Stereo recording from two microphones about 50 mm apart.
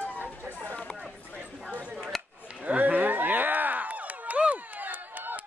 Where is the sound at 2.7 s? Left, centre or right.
Right.